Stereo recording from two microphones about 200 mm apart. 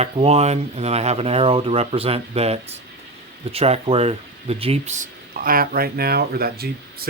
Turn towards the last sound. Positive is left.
turn(degrees=-50)  # may be behind; listen again after turning